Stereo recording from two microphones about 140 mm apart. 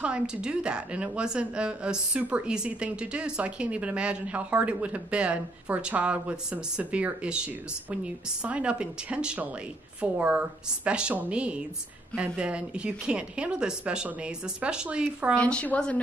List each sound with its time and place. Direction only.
0.0 s a woman's voice: 5° right (ahead or behind)
15.3 s a woman's voice: 10° left (ahead or behind)